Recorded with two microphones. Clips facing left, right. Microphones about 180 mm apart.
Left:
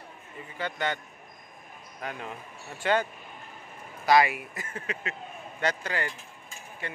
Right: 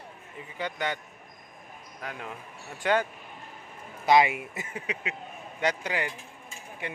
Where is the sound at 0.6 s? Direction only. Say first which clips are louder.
Left 1 dB; 10° right (ahead or behind).